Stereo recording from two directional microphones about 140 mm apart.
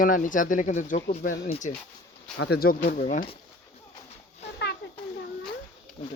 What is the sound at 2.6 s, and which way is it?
Speech, 90° left.